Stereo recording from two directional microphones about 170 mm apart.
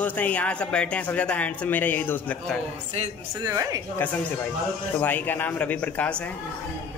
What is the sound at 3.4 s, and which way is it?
Speech, 20° right (ahead or behind).